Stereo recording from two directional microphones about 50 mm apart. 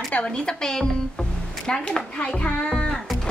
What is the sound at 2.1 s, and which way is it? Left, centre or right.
Hands, left.